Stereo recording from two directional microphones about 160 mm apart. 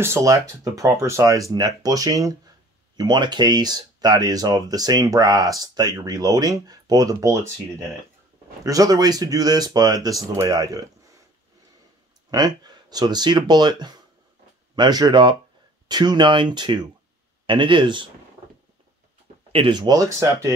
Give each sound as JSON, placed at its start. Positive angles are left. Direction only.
{"t": 0.0, "sound": "speech", "side_deg": -20}
{"t": 8.6, "sound": "speech", "side_deg": -20}
{"t": 12.3, "sound": "speech", "side_deg": -25}
{"t": 19.5, "sound": "speech", "side_deg": -30}